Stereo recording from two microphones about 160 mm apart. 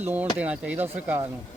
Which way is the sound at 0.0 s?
10° right (ahead or behind).